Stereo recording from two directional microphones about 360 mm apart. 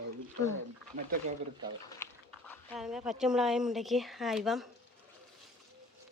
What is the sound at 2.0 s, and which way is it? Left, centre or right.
Dog, centre.